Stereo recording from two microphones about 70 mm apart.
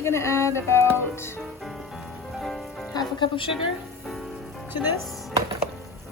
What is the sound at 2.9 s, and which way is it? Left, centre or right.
Music, left.